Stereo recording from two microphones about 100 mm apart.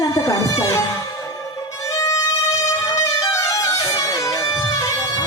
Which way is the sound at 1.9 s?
30° left (ahead or behind).